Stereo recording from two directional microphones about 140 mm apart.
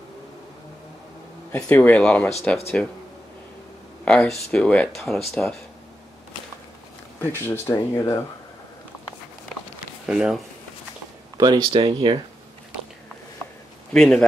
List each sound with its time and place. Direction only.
1.5 s speech: 10° left (ahead or behind)
4.0 s speech: 10° left (ahead or behind)
7.2 s speech: 15° left (ahead or behind)
10.0 s speech: 5° right (ahead or behind)
11.3 s speech: 30° right (ahead or behind)
13.9 s speech: 5° left (ahead or behind)